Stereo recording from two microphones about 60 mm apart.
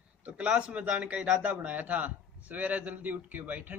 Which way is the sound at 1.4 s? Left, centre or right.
Right.